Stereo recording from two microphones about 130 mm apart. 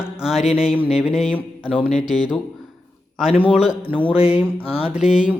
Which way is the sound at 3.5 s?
5° right (ahead or behind).